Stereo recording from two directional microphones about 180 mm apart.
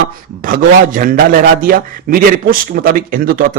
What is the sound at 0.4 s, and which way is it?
A man's voice, 50° right (ahead or behind).